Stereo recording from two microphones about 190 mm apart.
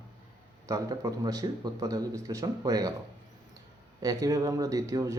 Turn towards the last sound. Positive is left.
turn(degrees=-15)  # may be behind; listen again after turning